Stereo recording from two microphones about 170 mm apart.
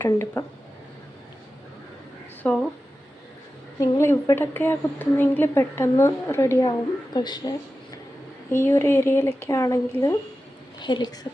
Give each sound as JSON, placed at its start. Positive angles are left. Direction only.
{"t": 0.0, "sound": "a woman's voice", "side_deg": 15}
{"t": 2.4, "sound": "speech", "side_deg": 5}
{"t": 3.8, "sound": "a woman's voice", "side_deg": 15}
{"t": 8.4, "sound": "a woman's voice", "side_deg": 15}